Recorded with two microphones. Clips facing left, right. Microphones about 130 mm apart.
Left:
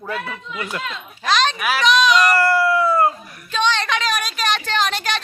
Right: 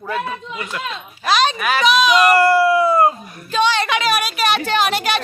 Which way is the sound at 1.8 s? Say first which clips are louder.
Right 2 dB; 10° right (ahead or behind).